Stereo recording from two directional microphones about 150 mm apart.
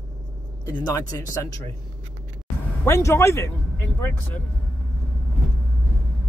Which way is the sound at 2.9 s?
20° left (ahead or behind).